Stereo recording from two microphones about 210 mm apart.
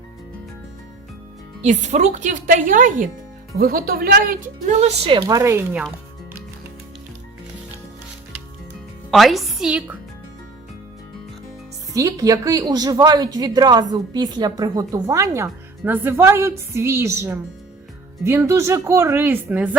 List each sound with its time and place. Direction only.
1.6 s a woman's voice: 35° right (ahead or behind)
5.0 s a woman's voice: 20° right (ahead or behind)
9.0 s a woman's voice: centre (ahead or behind)
11.9 s a woman's voice: 15° right (ahead or behind)